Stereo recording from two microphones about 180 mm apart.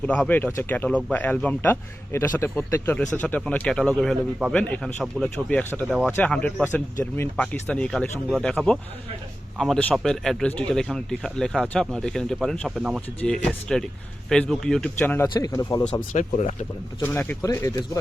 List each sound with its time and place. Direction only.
0.0 s speech: 5° left (ahead or behind)
14.9 s speech: 10° left (ahead or behind)
15.8 s speech: 40° left (ahead or behind)
17.0 s speech: 10° left (ahead or behind)